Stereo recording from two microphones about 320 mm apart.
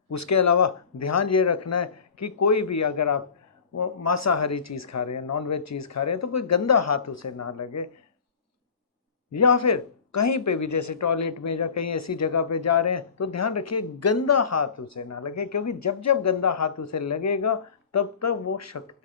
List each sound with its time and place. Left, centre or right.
0.1 s a man's voice: left
9.3 s a man's voice: left